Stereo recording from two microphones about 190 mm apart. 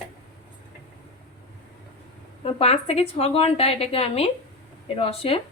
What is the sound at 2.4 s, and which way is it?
A woman's voice, 30° left (ahead or behind).